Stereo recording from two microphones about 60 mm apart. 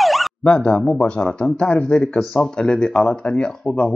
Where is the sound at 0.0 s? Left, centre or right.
Centre.